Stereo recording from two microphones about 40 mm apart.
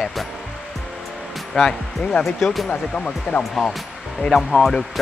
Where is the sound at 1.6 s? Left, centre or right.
Centre.